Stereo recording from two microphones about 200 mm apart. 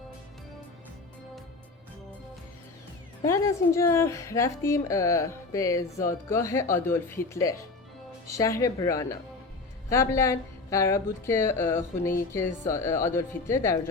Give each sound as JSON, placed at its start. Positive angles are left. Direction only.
{"t": 3.2, "sound": "a woman's voice", "side_deg": 15}
{"t": 8.3, "sound": "a woman's voice", "side_deg": 15}